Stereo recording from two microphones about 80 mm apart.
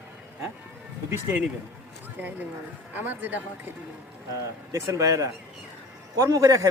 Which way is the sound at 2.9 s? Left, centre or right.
Right.